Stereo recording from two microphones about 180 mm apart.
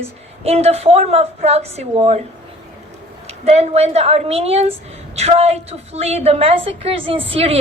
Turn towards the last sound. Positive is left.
turn(degrees=-30)  # may be behind; listen again after turning